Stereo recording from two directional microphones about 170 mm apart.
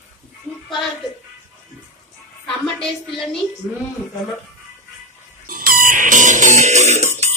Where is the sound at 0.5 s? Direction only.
5° right (ahead or behind).